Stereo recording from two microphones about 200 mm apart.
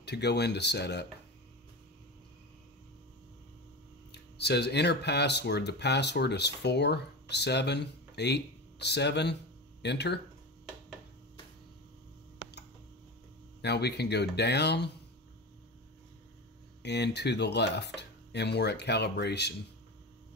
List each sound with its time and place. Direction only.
0.0 s speech: 55° left (ahead or behind)
4.1 s speech: 55° left (ahead or behind)
13.6 s speech: 55° left (ahead or behind)
16.8 s speech: 55° left (ahead or behind)